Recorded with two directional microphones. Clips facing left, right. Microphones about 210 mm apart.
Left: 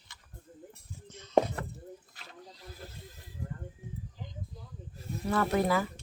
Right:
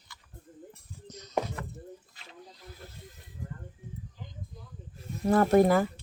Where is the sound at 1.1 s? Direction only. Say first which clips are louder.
Right 5 dB; 40° right (ahead or behind).